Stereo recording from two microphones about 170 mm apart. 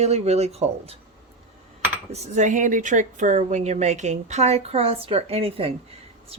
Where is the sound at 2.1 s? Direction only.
40° right (ahead or behind).